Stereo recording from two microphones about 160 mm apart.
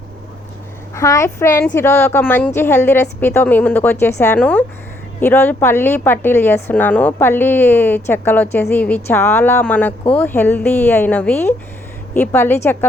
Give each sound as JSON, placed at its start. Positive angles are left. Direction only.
{"t": 0.9, "sound": "a woman's voice", "side_deg": 20}